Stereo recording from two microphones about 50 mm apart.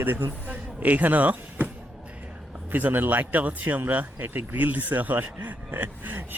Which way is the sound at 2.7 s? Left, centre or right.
Right.